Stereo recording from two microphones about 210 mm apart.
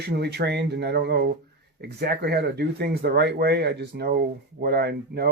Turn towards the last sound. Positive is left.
turn(degrees=-50)  # may be behind; listen again after turning